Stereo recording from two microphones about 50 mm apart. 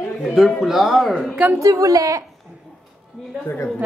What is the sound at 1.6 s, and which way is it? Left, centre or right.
Speech, right.